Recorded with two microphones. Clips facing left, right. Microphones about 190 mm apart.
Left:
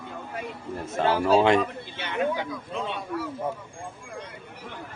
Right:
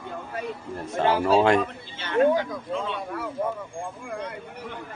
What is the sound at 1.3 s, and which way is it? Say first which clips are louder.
Speech: even; centre (ahead or behind).